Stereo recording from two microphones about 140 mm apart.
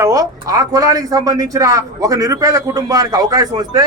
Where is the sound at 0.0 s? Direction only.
25° right (ahead or behind).